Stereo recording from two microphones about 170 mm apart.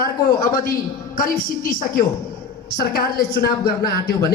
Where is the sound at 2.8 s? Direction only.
65° left (ahead or behind).